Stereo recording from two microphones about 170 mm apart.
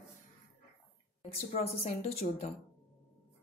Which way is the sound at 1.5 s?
35° left (ahead or behind).